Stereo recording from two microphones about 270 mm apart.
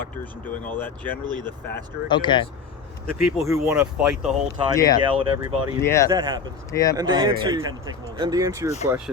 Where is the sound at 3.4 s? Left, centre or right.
Centre.